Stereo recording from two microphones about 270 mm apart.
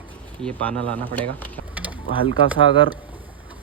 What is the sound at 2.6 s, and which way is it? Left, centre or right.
Speech, right.